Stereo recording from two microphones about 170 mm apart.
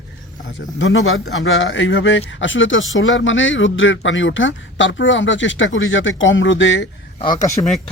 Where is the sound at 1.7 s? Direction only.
90° left.